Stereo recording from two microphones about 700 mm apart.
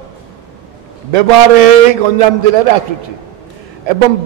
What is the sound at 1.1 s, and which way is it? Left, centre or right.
A man's voice, right.